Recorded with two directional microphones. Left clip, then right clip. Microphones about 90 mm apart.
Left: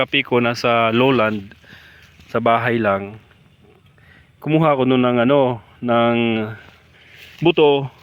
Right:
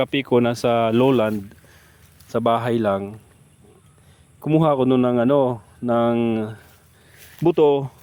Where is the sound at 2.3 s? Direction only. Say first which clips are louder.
Left 3 dB; 15° right (ahead or behind).